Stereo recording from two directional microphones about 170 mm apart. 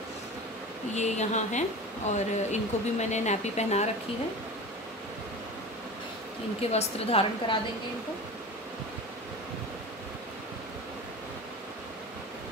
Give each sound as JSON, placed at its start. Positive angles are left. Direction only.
{"t": 0.9, "sound": "speech", "side_deg": 40}
{"t": 6.7, "sound": "a woman's voice", "side_deg": 35}